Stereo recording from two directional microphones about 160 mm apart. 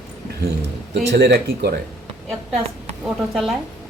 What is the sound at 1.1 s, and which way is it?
Speech, 90° right.